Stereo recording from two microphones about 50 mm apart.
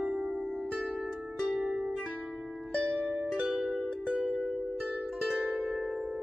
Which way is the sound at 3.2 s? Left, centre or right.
Centre.